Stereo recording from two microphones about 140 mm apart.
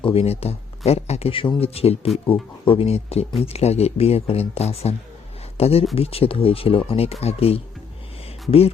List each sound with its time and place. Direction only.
0.0 s speech: 45° left (ahead or behind)